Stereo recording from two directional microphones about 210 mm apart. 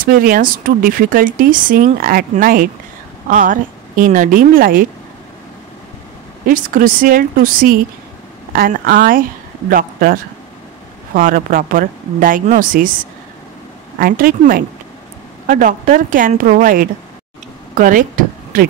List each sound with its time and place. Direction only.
0.0 s speech: 45° right (ahead or behind)
6.4 s speech: 40° right (ahead or behind)
11.1 s speech: 40° right (ahead or behind)
13.9 s speech: 45° right (ahead or behind)
17.7 s a sound: 40° right (ahead or behind)